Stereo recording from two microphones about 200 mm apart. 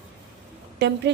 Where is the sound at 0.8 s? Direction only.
60° right (ahead or behind).